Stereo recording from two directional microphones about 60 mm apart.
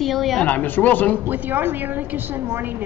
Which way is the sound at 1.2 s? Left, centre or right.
Right.